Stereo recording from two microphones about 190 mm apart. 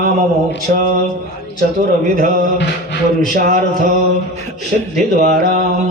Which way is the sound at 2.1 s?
45° right (ahead or behind).